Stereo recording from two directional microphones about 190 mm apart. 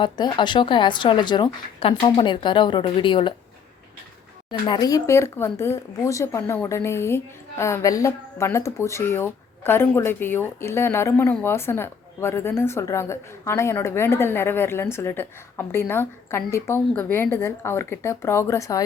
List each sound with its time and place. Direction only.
0.0 s speech: 25° left (ahead or behind)
4.6 s speech: 20° left (ahead or behind)